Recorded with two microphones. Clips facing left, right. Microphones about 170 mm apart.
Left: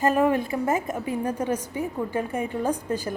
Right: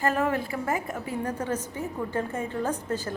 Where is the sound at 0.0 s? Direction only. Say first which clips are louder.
Left 5 dB; 15° left (ahead or behind).